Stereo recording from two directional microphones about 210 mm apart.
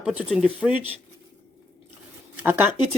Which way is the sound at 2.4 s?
10° right (ahead or behind).